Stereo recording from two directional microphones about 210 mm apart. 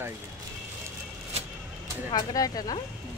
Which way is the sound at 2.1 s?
20° left (ahead or behind).